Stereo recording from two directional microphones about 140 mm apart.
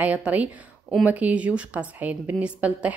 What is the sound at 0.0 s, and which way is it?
A woman's voice, 10° right (ahead or behind).